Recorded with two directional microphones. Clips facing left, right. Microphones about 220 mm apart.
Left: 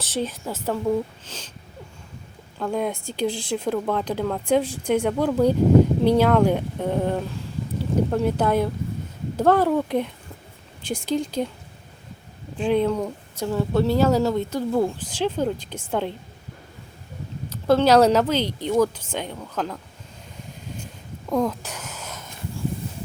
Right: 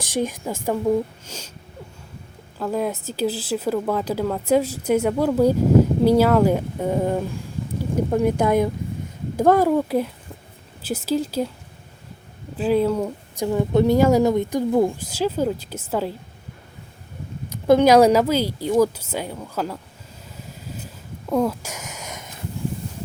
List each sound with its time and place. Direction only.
0.0 s speech: 15° right (ahead or behind)
2.6 s speech: 5° right (ahead or behind)
12.5 s speech: 5° right (ahead or behind)
17.7 s speech: 15° right (ahead or behind)
20.7 s a sound: 5° right (ahead or behind)